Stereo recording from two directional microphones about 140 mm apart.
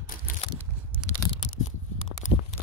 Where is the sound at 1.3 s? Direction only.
40° left (ahead or behind).